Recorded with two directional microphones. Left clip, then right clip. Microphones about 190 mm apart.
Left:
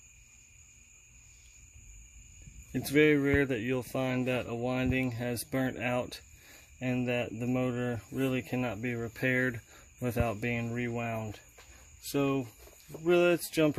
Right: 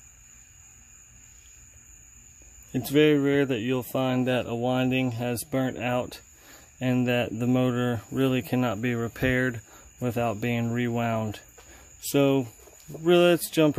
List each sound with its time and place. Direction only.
2.7 s speech: 10° right (ahead or behind)
6.8 s speech: 25° right (ahead or behind)
10.5 s speech: 30° right (ahead or behind)
13.0 s speech: 25° right (ahead or behind)